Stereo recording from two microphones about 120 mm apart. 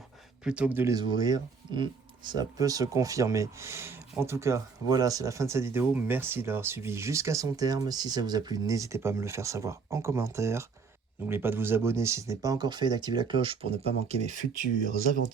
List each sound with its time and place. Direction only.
0.4 s speech: 10° right (ahead or behind)
0.9 s speech: 35° right (ahead or behind); by 14.3 s 65° right (ahead or behind)